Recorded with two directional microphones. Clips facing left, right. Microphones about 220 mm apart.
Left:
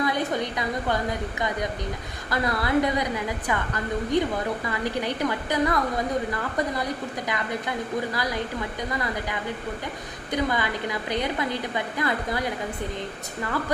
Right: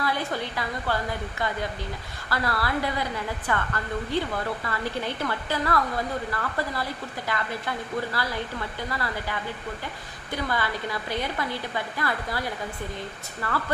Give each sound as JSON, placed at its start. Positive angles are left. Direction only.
{"t": 0.0, "sound": "a woman's voice", "side_deg": 20}
{"t": 2.3, "sound": "a woman's voice", "side_deg": 20}